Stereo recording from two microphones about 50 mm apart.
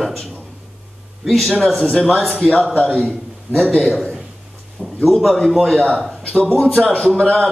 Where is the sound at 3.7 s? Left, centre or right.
Centre.